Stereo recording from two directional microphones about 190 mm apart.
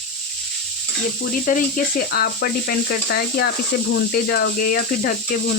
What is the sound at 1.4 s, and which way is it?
Speech, 45° left (ahead or behind).